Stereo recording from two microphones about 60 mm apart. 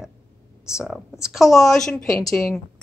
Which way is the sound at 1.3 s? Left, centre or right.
Centre.